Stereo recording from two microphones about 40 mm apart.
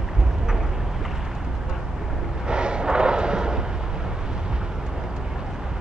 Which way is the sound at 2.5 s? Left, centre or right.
Right.